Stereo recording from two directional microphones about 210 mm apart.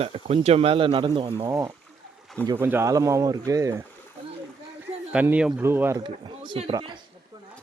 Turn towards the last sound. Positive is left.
turn(degrees=-25)  # may be behind; listen again after turning